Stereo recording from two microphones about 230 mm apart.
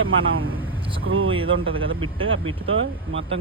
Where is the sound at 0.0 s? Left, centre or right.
Right.